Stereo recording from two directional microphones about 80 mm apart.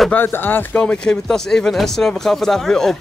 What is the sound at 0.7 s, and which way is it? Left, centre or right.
Speech, centre.